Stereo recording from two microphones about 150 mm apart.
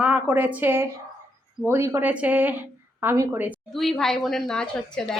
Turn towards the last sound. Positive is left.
turn(degrees=5)  # may be behind; listen again after turning